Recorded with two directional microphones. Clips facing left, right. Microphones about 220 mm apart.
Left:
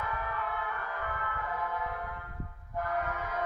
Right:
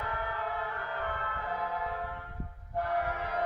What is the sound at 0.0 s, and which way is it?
Emergency vehicle, 35° right (ahead or behind).